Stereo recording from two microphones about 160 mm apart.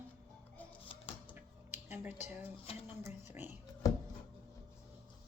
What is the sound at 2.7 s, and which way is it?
Speech, 35° left (ahead or behind).